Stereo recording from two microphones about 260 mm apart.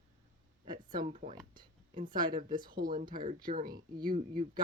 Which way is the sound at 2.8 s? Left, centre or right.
Right.